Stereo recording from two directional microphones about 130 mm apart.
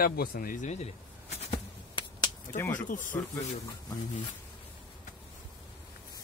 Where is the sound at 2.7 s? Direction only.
90° left.